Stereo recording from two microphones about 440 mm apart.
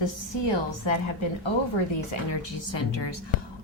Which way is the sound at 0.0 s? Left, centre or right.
Left.